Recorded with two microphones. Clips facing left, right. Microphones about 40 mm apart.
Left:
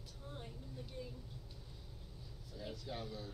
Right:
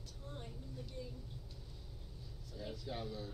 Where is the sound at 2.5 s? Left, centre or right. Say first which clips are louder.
Right 1 dB; centre.